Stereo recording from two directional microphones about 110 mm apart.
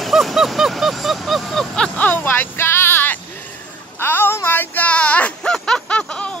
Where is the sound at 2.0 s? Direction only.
15° left (ahead or behind).